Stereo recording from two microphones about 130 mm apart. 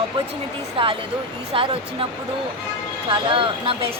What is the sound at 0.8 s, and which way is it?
Speech, 45° right (ahead or behind).